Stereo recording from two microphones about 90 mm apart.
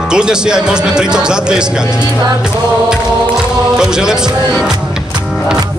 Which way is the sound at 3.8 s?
5° right (ahead or behind).